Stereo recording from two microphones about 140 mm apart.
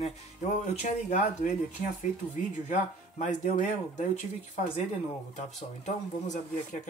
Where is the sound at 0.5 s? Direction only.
60° left (ahead or behind).